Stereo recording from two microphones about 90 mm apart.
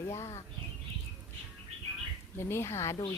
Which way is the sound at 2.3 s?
30° left (ahead or behind).